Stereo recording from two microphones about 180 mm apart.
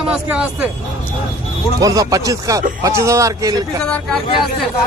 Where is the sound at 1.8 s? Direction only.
20° right (ahead or behind).